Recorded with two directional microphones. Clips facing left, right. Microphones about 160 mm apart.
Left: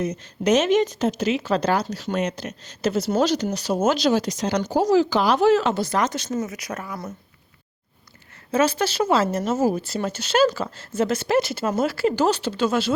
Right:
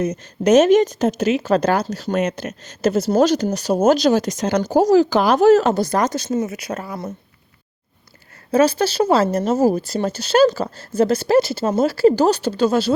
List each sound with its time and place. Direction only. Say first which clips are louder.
0.0 s speech: right 4 dB; 45° right (ahead or behind); by 7.1 s 30° right (ahead or behind)
8.5 s speech: right 5 dB; 35° right (ahead or behind)